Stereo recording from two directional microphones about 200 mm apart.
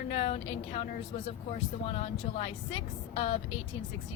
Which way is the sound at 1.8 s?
30° left (ahead or behind).